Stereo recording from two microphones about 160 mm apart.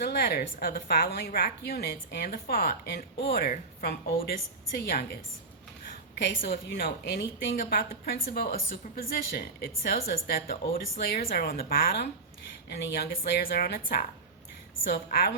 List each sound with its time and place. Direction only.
0.0 s a woman's voice: 85° left
6.1 s a woman's voice: 80° left
7.6 s a woman's voice: 65° left (ahead or behind)
12.6 s a woman's voice: 90° left; by 13.8 s 70° left (ahead or behind)
14.8 s a woman's voice: 80° left